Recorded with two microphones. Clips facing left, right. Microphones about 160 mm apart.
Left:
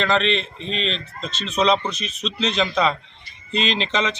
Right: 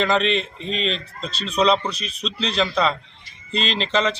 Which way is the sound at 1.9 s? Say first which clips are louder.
Left 1 dB; 35° right (ahead or behind).